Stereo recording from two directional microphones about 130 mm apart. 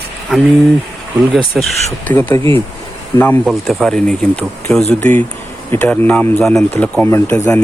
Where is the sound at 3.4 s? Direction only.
Centre (ahead or behind).